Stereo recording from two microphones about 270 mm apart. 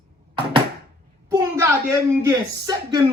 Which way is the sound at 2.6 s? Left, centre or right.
Centre.